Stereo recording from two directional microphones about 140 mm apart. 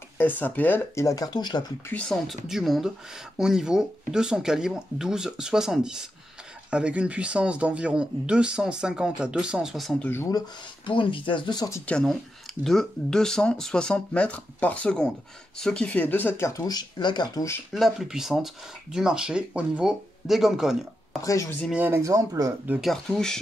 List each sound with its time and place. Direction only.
0.2 s speech: 15° left (ahead or behind); by 1.7 s 30° left (ahead or behind)
1.9 s speech: 10° left (ahead or behind)
2.2 s speech: centre (ahead or behind)
10.0 s speech: 15° left (ahead or behind)
10.9 s speech: 35° left (ahead or behind)
11.8 s speech: 5° left (ahead or behind); by 17.5 s 30° left (ahead or behind)
17.7 s speech: centre (ahead or behind)
21.2 s speech: 25° left (ahead or behind)
21.7 s speech: 15° right (ahead or behind)
22.7 s speech: centre (ahead or behind)